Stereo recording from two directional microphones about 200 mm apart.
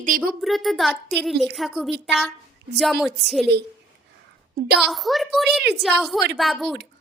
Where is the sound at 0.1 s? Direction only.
45° right (ahead or behind).